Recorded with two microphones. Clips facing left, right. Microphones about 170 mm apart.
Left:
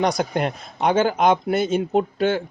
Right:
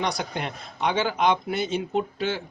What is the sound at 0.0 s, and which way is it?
Speech, 45° left (ahead or behind).